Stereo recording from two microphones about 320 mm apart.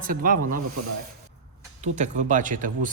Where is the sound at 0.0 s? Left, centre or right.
Right.